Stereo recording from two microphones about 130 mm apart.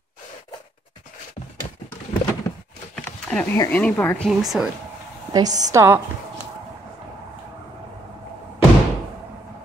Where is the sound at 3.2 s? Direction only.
10° left (ahead or behind).